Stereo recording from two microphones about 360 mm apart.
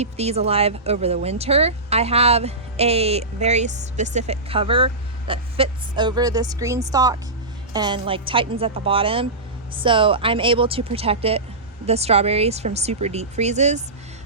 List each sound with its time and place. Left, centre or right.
0.0 s speech: centre